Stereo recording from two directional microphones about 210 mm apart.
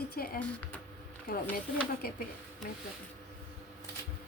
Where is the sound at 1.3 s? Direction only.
45° left (ahead or behind).